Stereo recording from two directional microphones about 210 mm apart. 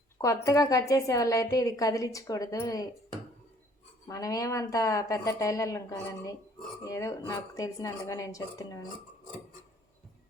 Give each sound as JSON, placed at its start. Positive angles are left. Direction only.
{"t": 0.2, "sound": "a woman's voice", "side_deg": 15}
{"t": 4.1, "sound": "a woman's voice", "side_deg": 15}